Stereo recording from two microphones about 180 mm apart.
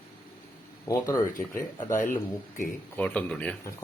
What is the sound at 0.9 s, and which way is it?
Speech, 20° left (ahead or behind).